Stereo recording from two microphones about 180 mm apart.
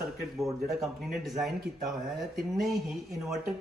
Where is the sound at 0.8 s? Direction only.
Centre (ahead or behind).